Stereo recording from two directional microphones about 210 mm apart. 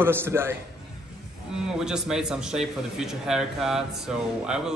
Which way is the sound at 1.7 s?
5° right (ahead or behind).